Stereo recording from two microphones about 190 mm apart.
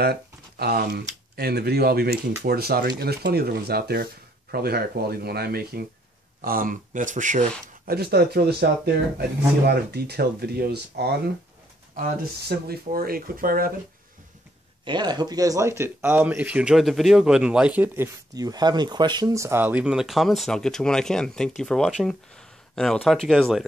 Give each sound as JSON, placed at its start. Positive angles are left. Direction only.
{"t": 0.0, "sound": "speech", "side_deg": -55}
{"t": 14.9, "sound": "speech", "side_deg": -20}